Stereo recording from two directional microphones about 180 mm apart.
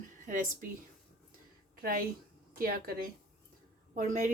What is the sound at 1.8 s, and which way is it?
A woman's voice, 55° right (ahead or behind).